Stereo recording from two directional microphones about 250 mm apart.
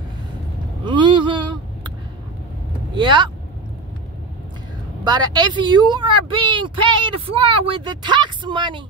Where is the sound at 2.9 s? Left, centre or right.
Centre.